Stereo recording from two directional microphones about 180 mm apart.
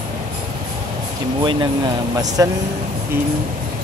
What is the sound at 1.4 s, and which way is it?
Speech, 25° right (ahead or behind).